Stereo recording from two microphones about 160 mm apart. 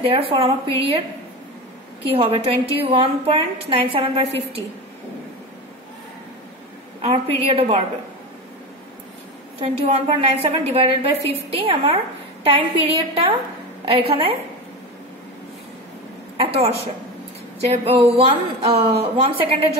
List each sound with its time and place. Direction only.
0.0 s a woman's voice: 35° right (ahead or behind)
2.1 s a woman's voice: 35° right (ahead or behind)
7.0 s a woman's voice: 40° right (ahead or behind)
10.0 s a woman's voice: 40° right (ahead or behind)
16.3 s a woman's voice: 40° right (ahead or behind)